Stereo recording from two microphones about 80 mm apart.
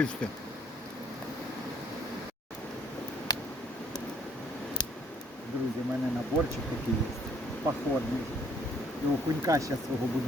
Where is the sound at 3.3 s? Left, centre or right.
Left.